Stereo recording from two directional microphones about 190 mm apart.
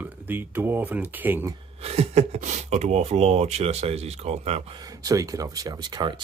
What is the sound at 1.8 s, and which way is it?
Speech, 35° right (ahead or behind).